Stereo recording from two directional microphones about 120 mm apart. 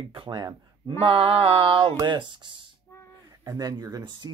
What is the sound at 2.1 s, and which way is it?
Speech, 40° right (ahead or behind).